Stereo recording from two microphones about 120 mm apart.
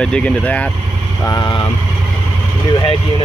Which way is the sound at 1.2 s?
35° left (ahead or behind).